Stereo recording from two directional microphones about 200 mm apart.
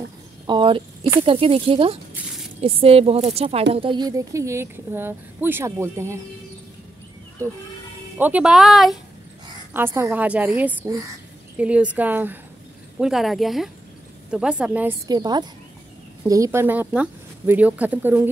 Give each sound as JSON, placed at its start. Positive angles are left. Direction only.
{"t": 0.5, "sound": "a woman's voice", "side_deg": -25}
{"t": 8.2, "sound": "speech", "side_deg": -5}
{"t": 9.8, "sound": "a woman's voice", "side_deg": -10}
{"t": 15.0, "sound": "a woman's voice", "side_deg": -20}